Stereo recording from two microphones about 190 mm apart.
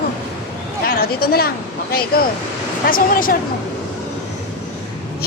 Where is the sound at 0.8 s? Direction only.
50° left (ahead or behind).